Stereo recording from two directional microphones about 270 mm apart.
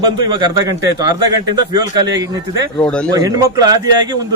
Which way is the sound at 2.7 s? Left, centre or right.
Centre.